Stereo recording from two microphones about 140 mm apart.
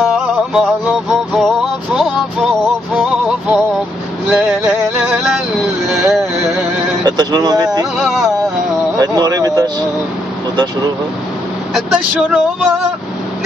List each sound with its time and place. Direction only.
0.0 s music: 5° right (ahead or behind)
4.3 s male singing: 5° right (ahead or behind)
5.9 s vehicle: 5° right (ahead or behind)
7.0 s a sound: 30° right (ahead or behind)
8.0 s a sound: 5° right (ahead or behind)
8.9 s speech: 30° right (ahead or behind)
11.7 s speech: 5° right (ahead or behind)